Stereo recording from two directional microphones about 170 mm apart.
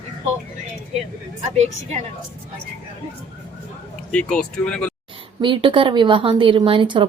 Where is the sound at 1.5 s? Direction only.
40° right (ahead or behind).